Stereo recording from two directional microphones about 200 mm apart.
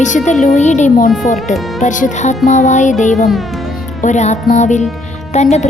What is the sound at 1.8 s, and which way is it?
A woman's voice, 40° left (ahead or behind).